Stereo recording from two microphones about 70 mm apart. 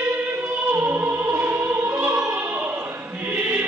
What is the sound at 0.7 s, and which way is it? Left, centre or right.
Opera, right.